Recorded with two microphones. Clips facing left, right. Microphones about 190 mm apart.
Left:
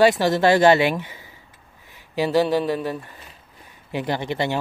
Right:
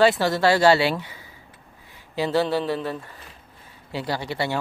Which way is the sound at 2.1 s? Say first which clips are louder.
Left 3 dB; 15° left (ahead or behind).